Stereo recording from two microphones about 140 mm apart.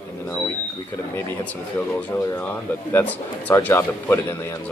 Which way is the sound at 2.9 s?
10° left (ahead or behind).